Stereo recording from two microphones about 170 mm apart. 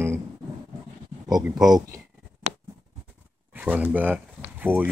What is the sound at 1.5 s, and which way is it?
Speech, 20° right (ahead or behind).